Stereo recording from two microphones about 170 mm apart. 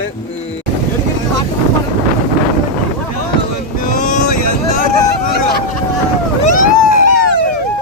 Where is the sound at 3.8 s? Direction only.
50° left (ahead or behind).